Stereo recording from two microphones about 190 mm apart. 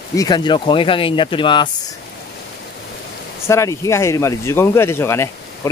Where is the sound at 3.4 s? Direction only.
15° left (ahead or behind).